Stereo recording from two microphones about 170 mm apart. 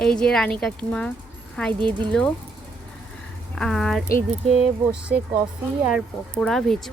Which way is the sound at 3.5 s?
5° left (ahead or behind).